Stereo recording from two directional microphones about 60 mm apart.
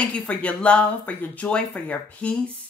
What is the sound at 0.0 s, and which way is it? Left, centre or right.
A woman's voice, left.